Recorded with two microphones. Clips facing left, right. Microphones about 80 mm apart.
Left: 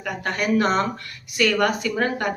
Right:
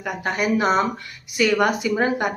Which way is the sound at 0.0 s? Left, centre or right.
Centre.